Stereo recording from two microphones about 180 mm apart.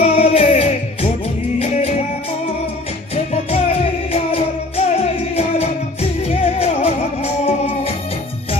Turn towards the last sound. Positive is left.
turn(degrees=35)  # may be behind; listen again after turning